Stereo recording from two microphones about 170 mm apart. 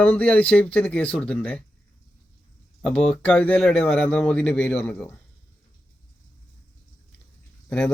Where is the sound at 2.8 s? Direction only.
5° left (ahead or behind).